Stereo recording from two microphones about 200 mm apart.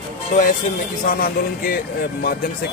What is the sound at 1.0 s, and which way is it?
Music, 45° left (ahead or behind).